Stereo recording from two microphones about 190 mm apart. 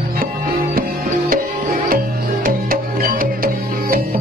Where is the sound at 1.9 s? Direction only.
50° right (ahead or behind).